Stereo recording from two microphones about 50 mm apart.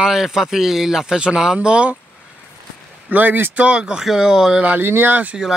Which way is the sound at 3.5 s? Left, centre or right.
Right.